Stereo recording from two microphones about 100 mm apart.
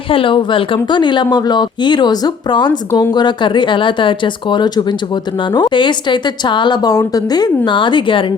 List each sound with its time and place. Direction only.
0.1 s speech: 60° left (ahead or behind)